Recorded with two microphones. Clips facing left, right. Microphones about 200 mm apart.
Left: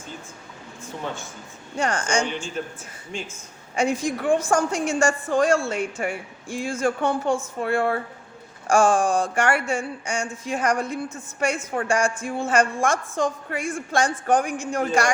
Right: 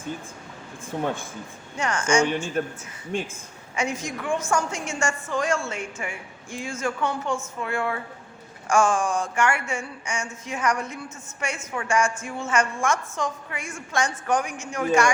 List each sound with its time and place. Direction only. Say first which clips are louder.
1.0 s speech: right 4 dB; 55° right (ahead or behind)
1.7 s a woman's voice: right 1 dB; 35° left (ahead or behind)
2.6 s speech: right 4 dB; 50° right (ahead or behind)
3.8 s a woman's voice: left 5 dB; 30° left (ahead or behind)